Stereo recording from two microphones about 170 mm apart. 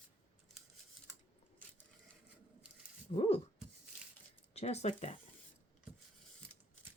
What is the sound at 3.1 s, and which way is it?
Speech, 35° left (ahead or behind).